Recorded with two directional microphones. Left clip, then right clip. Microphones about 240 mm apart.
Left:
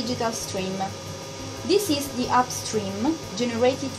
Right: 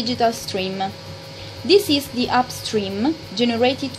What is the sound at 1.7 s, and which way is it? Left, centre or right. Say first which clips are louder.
A woman's voice: right 7 dB; right.